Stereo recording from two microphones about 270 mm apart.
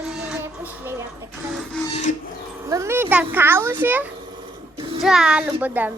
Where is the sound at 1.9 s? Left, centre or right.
Left.